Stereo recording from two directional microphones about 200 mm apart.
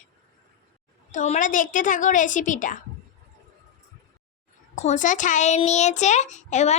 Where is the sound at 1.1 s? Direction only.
40° left (ahead or behind).